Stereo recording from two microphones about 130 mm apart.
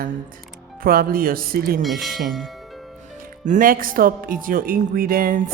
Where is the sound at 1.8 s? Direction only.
Centre (ahead or behind).